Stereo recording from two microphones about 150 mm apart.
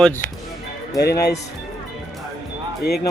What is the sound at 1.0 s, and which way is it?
Speech, 90° left.